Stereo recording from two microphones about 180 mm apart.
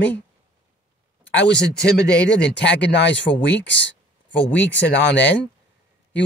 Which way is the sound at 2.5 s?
75° left (ahead or behind).